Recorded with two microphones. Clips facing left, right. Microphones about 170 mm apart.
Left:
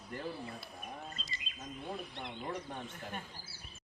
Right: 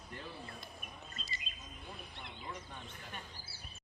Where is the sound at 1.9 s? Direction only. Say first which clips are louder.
Left 7 dB; 55° left (ahead or behind).